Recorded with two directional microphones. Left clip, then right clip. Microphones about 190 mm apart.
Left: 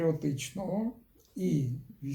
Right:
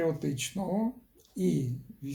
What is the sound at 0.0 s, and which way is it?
Speech, 10° right (ahead or behind).